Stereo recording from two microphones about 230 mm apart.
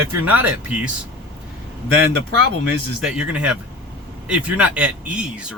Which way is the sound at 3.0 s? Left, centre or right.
Centre.